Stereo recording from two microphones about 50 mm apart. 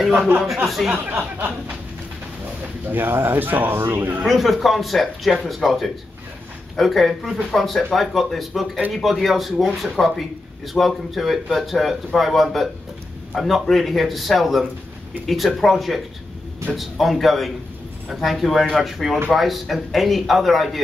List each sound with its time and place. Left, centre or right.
0.7 s speech: centre
0.9 s speech: right
2.9 s speech: right
4.2 s speech: centre